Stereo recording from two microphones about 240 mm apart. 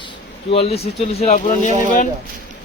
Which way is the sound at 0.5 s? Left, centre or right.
Left.